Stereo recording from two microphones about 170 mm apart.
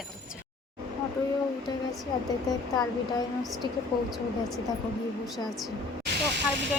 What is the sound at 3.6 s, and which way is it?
Speech, 25° right (ahead or behind).